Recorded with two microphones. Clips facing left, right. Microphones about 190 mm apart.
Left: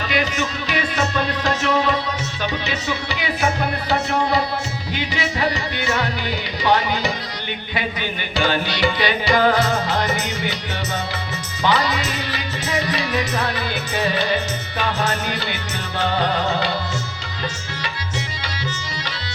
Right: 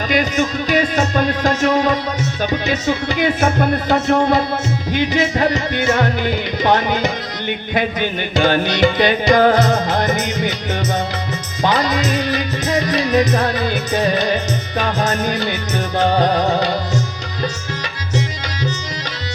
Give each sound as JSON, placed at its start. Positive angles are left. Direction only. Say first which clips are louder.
{"t": 0.1, "sound": "music", "louder": "right 6 dB", "side_deg": -45}
{"t": 8.4, "sound": "music", "louder": "right 6 dB", "side_deg": -50}
{"t": 11.6, "sound": "music", "louder": "right 3 dB", "side_deg": -45}